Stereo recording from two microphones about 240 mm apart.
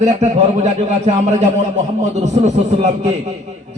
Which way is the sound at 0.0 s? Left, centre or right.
Right.